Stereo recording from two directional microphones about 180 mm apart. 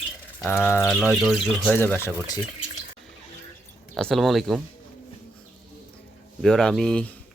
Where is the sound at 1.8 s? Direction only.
10° left (ahead or behind).